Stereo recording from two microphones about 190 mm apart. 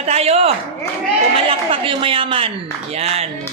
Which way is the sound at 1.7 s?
30° right (ahead or behind).